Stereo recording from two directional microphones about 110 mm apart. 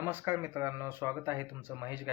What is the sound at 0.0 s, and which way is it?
Speech, 20° right (ahead or behind).